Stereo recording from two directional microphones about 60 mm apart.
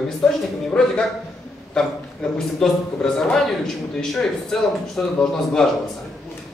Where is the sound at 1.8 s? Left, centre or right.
Centre.